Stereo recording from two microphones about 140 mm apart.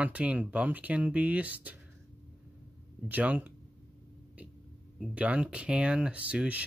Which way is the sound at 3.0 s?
10° right (ahead or behind).